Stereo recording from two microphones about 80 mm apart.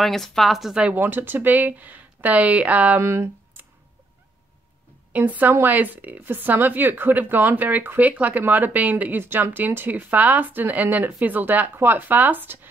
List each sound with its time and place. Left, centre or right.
0.0 s a woman's voice: centre
0.8 s speech: right
3.0 s speech: right
5.1 s speech: right